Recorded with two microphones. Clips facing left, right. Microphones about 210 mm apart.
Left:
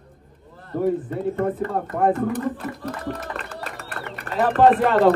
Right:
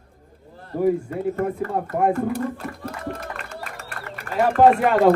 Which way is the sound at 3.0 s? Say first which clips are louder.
Left 1 dB; 35° left (ahead or behind).